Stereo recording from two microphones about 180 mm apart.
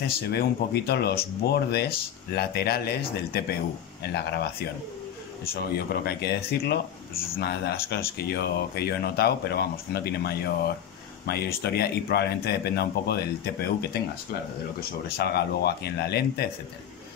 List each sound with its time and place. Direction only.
0.0 s speech: 60° left (ahead or behind)
5.5 s speech: 60° left (ahead or behind)